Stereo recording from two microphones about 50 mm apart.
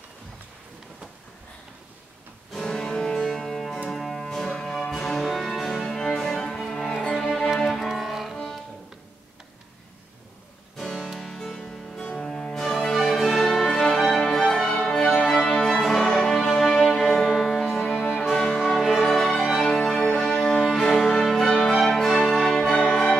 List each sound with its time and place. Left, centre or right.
2.5 s music: centre
10.8 s music: centre
15.6 s music: centre
18.6 s music: centre
19.7 s music: centre